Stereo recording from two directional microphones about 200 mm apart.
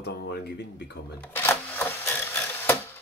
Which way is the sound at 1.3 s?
10° left (ahead or behind).